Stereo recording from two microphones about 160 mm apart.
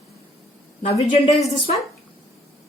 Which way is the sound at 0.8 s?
45° left (ahead or behind).